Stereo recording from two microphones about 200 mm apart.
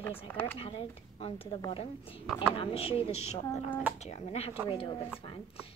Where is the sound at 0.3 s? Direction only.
10° left (ahead or behind).